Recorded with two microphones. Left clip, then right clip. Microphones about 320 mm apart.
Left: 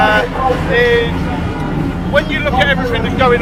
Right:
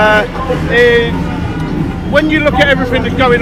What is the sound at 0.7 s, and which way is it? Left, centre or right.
Music, right.